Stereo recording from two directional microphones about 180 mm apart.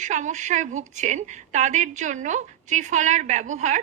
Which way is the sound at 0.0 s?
40° right (ahead or behind).